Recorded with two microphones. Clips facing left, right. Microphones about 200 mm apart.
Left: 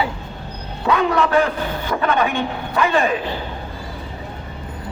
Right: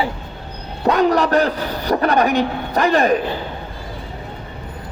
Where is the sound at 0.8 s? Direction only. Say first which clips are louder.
Right 3 dB; 40° right (ahead or behind).